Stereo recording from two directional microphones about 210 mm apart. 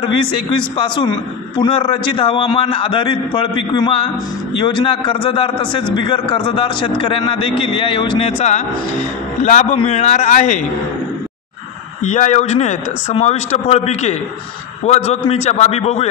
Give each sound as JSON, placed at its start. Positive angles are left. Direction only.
{"t": 0.0, "sound": "a man's voice", "side_deg": 25}
{"t": 12.0, "sound": "speech", "side_deg": 35}